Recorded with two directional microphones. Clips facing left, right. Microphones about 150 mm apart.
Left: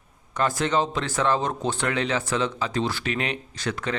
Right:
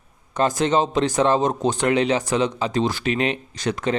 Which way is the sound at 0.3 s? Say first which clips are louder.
Right 4 dB; 20° right (ahead or behind).